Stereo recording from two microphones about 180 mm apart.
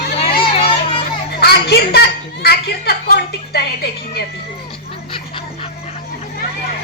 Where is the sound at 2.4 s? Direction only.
65° left (ahead or behind).